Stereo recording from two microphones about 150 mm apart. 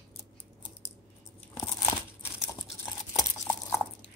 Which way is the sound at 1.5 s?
20° left (ahead or behind).